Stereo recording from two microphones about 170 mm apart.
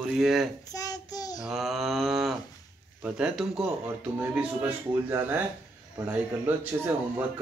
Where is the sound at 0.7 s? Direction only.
20° left (ahead or behind).